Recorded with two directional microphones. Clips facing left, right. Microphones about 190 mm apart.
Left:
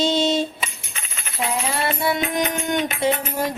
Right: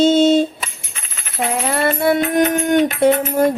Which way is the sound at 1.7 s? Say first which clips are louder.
Right 9 dB; 55° right (ahead or behind).